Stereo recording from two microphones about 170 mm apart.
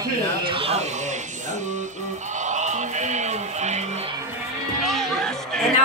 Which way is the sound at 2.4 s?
45° right (ahead or behind).